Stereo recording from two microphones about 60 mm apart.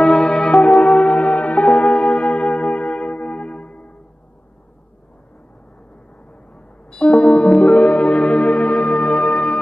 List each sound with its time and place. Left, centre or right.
0.0 s music: centre
0.5 s church bell: centre
0.8 s music: centre
7.1 s music: centre
7.3 s music: centre